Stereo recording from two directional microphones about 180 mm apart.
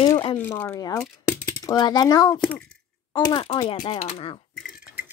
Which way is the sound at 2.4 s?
5° left (ahead or behind).